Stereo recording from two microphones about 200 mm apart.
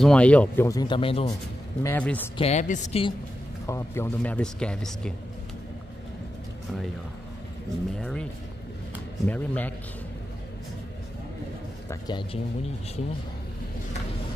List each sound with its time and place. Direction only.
0.0 s speech: 5° left (ahead or behind); by 1.3 s 25° left (ahead or behind)
1.8 s speech: 10° left (ahead or behind)
2.3 s a woman's voice: 35° left (ahead or behind)
3.6 s speech: 15° left (ahead or behind)
8.0 s speech: 5° left (ahead or behind)
9.3 s speech: 10° left (ahead or behind)
11.9 s speech: 20° left (ahead or behind)